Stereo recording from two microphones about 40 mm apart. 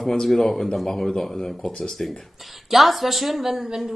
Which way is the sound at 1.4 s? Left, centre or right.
Left.